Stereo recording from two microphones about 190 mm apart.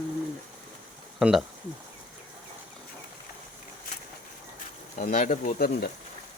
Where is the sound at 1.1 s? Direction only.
Centre (ahead or behind).